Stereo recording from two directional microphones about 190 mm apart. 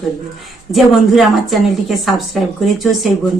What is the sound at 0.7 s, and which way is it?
A woman's voice, centre (ahead or behind).